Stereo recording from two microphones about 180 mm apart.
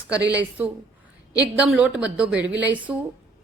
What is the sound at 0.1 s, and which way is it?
Speech, 20° left (ahead or behind).